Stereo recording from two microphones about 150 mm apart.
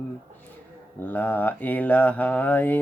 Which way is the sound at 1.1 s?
10° left (ahead or behind).